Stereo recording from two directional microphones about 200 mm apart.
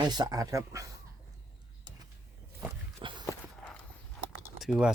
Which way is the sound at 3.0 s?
25° right (ahead or behind).